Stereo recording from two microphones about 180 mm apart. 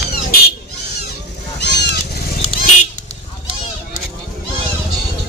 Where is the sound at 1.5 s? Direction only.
70° left (ahead or behind).